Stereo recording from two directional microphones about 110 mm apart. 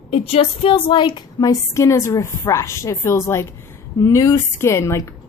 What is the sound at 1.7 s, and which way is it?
A woman's voice, 25° left (ahead or behind).